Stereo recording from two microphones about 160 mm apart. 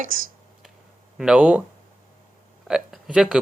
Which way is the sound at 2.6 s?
5° right (ahead or behind).